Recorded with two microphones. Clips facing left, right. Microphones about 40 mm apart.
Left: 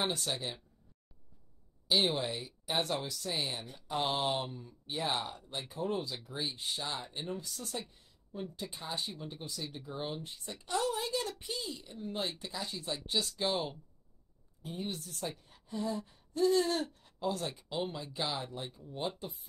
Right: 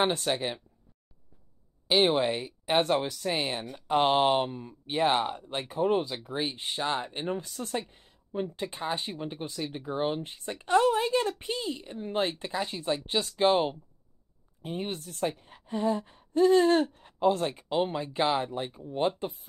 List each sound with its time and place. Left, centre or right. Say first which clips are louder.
0.0 s speech: right 8 dB; right
1.9 s speech: right 7 dB; right